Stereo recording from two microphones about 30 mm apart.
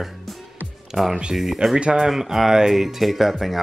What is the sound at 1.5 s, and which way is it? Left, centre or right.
Speech, centre.